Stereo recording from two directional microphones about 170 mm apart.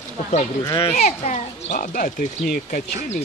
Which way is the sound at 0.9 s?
45° left (ahead or behind).